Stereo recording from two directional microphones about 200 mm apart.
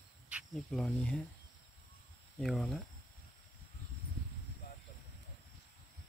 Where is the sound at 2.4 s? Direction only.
Centre (ahead or behind).